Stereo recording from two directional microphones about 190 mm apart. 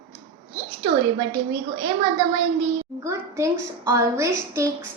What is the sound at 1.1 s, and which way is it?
Speech, 25° right (ahead or behind).